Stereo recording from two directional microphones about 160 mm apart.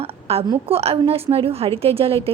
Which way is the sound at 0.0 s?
40° right (ahead or behind).